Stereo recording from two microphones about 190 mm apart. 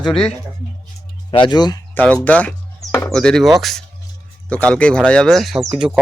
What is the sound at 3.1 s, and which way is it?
Speech, 5° left (ahead or behind).